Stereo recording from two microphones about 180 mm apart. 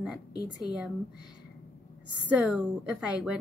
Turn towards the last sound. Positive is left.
turn(degrees=-5)  # may be behind; listen again after turning